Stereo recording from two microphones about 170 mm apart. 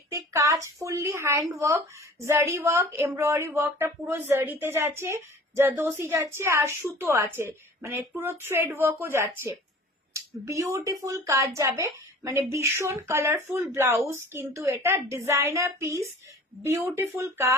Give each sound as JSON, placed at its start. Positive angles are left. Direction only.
{"t": 0.1, "sound": "a woman's voice", "side_deg": -20}